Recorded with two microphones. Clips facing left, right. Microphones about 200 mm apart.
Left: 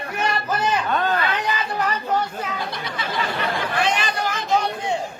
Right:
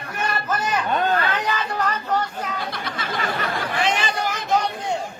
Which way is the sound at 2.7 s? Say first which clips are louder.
Even; 50° right (ahead or behind).